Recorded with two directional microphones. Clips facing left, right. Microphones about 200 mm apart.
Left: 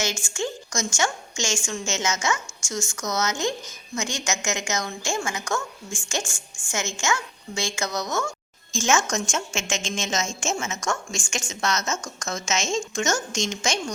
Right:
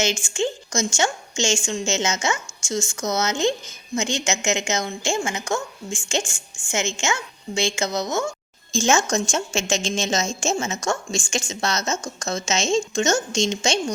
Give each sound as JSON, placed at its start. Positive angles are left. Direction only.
{"t": 0.0, "sound": "a woman's voice", "side_deg": -20}